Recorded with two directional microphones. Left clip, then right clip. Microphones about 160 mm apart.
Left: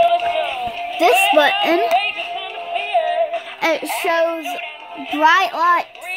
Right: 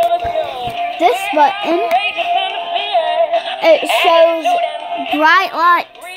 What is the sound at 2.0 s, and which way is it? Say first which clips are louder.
Synthetic singing: right 7 dB; 35° right (ahead or behind).